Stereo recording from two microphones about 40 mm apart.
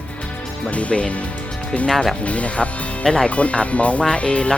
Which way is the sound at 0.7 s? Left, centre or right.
Left.